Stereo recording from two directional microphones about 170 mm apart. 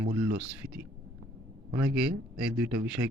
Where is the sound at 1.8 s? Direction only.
5° right (ahead or behind).